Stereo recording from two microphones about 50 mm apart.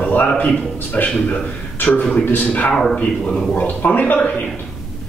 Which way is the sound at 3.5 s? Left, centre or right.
Left.